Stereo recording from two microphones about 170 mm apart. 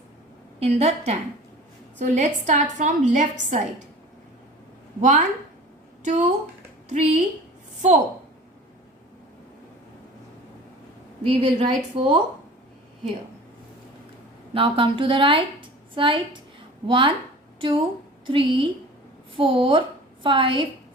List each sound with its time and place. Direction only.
0.6 s a woman's voice: 40° right (ahead or behind)
4.9 s a woman's voice: 45° right (ahead or behind)
11.3 s a woman's voice: 35° right (ahead or behind)
14.5 s a woman's voice: 30° right (ahead or behind)